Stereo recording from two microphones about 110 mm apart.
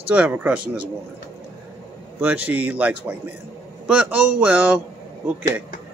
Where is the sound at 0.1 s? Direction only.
15° right (ahead or behind).